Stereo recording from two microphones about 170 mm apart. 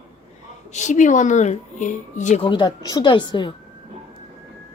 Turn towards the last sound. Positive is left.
turn(degrees=25)  # may be behind; listen again after turning